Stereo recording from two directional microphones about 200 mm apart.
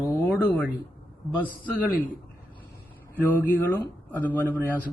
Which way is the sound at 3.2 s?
10° left (ahead or behind).